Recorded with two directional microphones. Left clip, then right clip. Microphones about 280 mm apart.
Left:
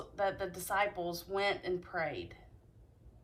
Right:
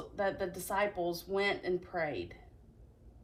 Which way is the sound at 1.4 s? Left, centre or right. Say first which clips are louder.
Even; left.